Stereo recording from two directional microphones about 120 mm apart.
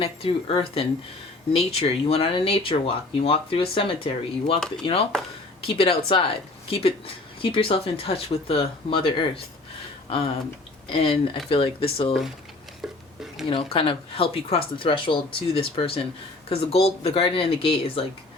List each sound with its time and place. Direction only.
0.0 s speech: 50° left (ahead or behind)
5.6 s speech: 55° left (ahead or behind)
10.8 s speech: 50° left (ahead or behind)
12.8 s a sound: centre (ahead or behind)
13.5 s speech: 50° left (ahead or behind)